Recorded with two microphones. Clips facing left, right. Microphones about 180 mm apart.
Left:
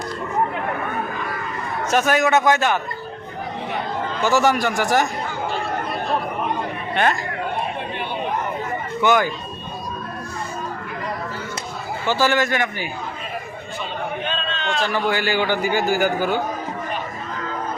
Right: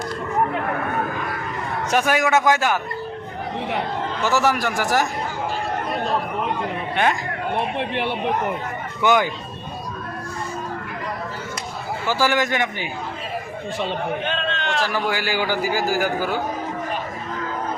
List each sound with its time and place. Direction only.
1.9 s a man's voice: 10° right (ahead or behind)
4.2 s a man's voice: centre (ahead or behind)
6.9 s speech: 15° right (ahead or behind)
7.8 s chatter: 75° right (ahead or behind)
9.0 s speech: 15° right (ahead or behind)
12.0 s a man's voice: 10° right (ahead or behind)
14.3 s a sound: 55° right (ahead or behind)
14.9 s a man's voice: 10° right (ahead or behind)